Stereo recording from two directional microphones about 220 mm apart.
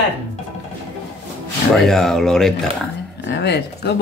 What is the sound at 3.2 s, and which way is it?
Speech, 50° left (ahead or behind).